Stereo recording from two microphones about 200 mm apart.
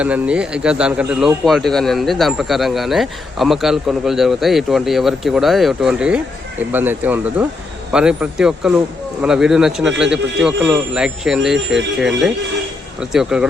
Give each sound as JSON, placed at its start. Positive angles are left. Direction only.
{"t": 0.0, "sound": "speech", "side_deg": -5}